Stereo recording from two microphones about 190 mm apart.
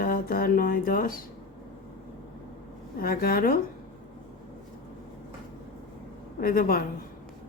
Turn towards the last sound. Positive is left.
turn(degrees=50)  # may be behind; listen again after turning